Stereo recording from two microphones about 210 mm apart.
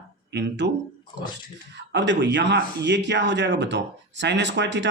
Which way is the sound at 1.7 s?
55° right (ahead or behind).